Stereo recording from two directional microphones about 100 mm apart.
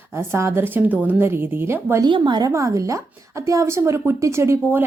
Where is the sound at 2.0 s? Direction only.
50° right (ahead or behind).